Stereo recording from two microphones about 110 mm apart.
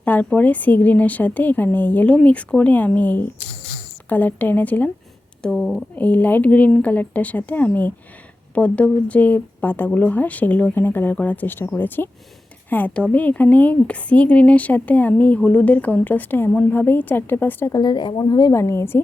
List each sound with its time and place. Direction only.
0.0 s a woman's voice: 15° left (ahead or behind)
5.4 s speech: centre (ahead or behind)
6.0 s a woman's voice: 15° left (ahead or behind)
17.7 s a woman's voice: 40° left (ahead or behind); by 19.0 s 20° left (ahead or behind)